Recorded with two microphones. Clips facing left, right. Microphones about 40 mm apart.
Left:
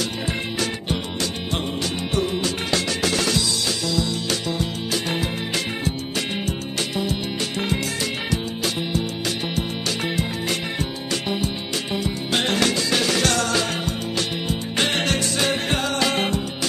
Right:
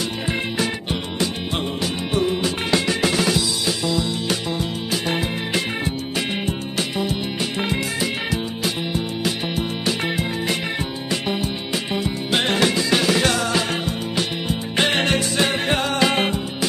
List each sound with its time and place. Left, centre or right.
0.3 s music: centre
7.0 s music: centre